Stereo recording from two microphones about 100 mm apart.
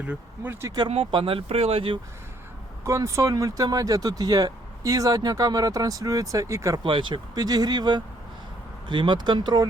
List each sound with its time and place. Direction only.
0.0 s speech: 15° right (ahead or behind)
0.9 s speech: 65° right (ahead or behind)
2.8 s speech: 30° right (ahead or behind)
6.8 s speech: 55° right (ahead or behind)